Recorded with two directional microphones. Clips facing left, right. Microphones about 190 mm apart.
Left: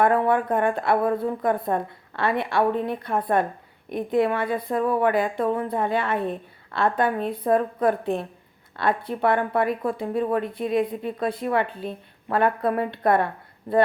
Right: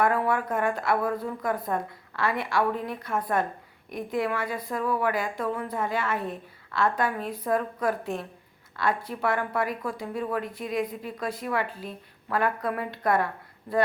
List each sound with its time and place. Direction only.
0.0 s a woman's voice: 30° left (ahead or behind)